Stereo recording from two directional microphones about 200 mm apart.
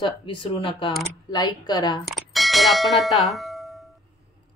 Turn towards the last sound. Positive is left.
turn(degrees=0)  # may be behind; listen again after turning